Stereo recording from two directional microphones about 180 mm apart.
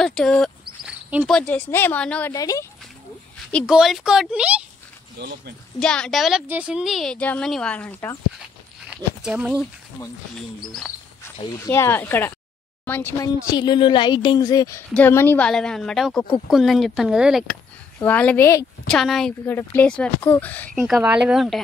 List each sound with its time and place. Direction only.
0.0 s a woman's voice: 5° left (ahead or behind)
2.3 s speech: 20° left (ahead or behind)
3.5 s a woman's voice: centre (ahead or behind)
5.8 s a woman's voice: 5° left (ahead or behind)
8.8 s speech: 5° right (ahead or behind)
11.4 s speech: 15° left (ahead or behind)
13.5 s a woman's voice: 25° left (ahead or behind)
18.9 s a woman's voice: centre (ahead or behind)
20.8 s a woman's voice: 5° right (ahead or behind)